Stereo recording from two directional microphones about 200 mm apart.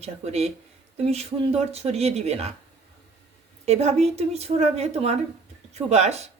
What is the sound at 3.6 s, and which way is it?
Speech, 30° right (ahead or behind).